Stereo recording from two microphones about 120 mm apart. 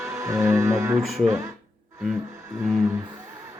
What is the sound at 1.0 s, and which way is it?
Speech, centre (ahead or behind).